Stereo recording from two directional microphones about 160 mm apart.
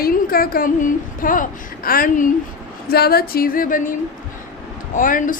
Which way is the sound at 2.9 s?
75° left (ahead or behind).